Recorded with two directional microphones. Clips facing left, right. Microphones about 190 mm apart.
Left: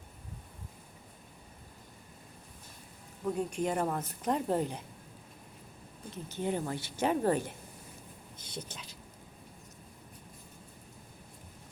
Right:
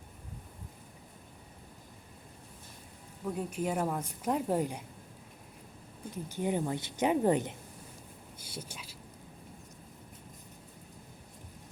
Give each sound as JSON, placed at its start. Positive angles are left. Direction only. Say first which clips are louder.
{"t": 3.2, "sound": "speech", "louder": "left 2 dB", "side_deg": -5}
{"t": 6.1, "sound": "speech", "louder": "right 1 dB", "side_deg": -15}
{"t": 8.4, "sound": "speech", "louder": "left 1 dB", "side_deg": -10}